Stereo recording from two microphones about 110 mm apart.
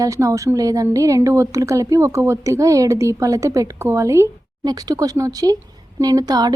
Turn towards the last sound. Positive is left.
turn(degrees=-35)  # may be behind; listen again after turning